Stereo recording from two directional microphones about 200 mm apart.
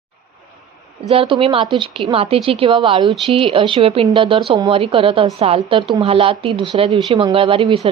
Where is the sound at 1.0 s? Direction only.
25° right (ahead or behind).